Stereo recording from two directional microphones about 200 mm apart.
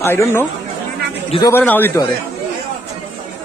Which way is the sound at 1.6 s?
10° left (ahead or behind).